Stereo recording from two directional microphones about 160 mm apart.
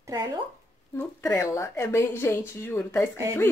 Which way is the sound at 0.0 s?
20° right (ahead or behind).